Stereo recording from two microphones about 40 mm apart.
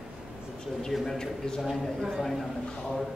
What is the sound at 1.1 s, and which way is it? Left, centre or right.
Speech, centre.